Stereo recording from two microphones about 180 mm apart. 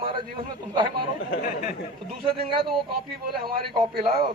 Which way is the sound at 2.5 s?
55° right (ahead or behind).